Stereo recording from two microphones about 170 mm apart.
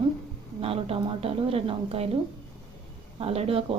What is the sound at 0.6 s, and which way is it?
A woman's voice, 35° right (ahead or behind).